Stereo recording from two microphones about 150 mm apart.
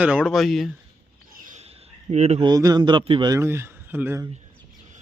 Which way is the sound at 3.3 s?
15° right (ahead or behind).